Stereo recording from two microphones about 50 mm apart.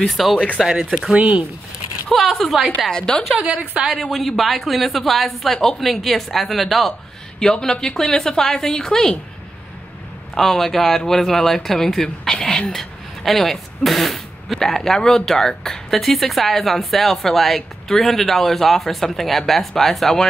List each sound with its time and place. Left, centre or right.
0.0 s speech: centre
1.1 s a woman's voice: right
2.0 s speech: centre
2.9 s a woman's voice: centre
3.4 s a woman's voice: right
4.0 s a woman's voice: centre
10.3 s a woman's voice: centre